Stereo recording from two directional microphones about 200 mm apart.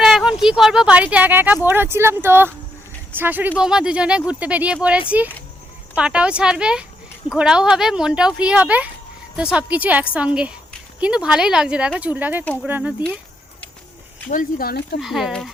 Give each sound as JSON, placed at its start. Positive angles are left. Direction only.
{"t": 0.0, "sound": "speech", "side_deg": 0}
{"t": 14.3, "sound": "speech", "side_deg": 45}
{"t": 15.0, "sound": "speech", "side_deg": 0}